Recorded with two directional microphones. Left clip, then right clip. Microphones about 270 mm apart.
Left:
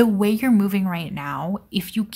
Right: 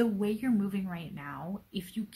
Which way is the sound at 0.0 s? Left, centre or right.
Left.